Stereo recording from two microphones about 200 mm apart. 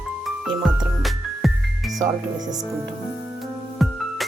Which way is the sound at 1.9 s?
20° right (ahead or behind).